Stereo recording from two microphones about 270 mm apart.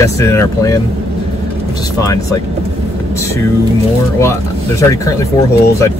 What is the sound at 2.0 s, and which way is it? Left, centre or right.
Speech, centre.